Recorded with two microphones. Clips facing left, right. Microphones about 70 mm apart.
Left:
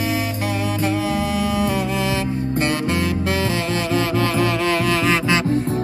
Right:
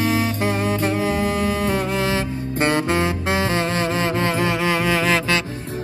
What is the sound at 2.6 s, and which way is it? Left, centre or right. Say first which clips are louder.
Music: right 5 dB; right.